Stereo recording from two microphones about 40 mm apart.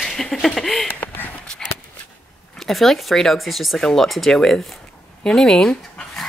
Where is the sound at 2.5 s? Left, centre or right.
Centre.